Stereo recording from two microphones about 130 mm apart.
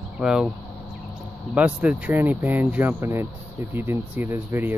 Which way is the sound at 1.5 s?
10° right (ahead or behind).